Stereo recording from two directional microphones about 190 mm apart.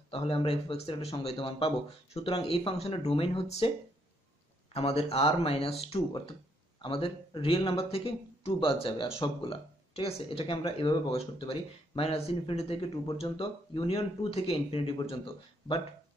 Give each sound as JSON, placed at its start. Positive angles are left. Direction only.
{"t": 0.1, "sound": "speech", "side_deg": 30}
{"t": 4.7, "sound": "speech", "side_deg": 30}